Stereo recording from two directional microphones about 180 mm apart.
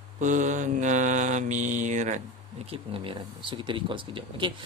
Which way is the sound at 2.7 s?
30° right (ahead or behind).